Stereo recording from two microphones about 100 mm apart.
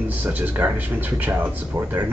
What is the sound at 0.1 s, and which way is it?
Speech, 15° right (ahead or behind).